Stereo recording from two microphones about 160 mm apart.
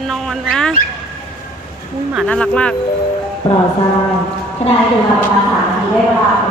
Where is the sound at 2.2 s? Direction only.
5° left (ahead or behind).